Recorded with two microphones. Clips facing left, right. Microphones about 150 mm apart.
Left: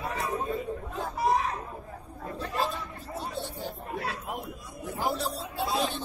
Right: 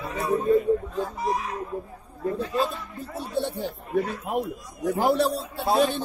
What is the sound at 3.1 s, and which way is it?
Chatter, 65° right (ahead or behind).